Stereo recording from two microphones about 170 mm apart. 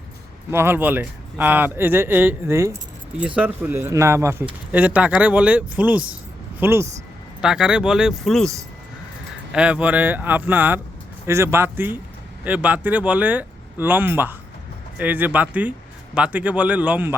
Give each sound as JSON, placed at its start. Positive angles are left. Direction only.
{"t": 0.5, "sound": "speech", "side_deg": -15}
{"t": 9.5, "sound": "speech", "side_deg": -5}